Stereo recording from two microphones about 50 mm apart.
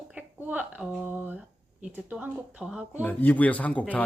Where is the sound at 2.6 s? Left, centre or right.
Centre.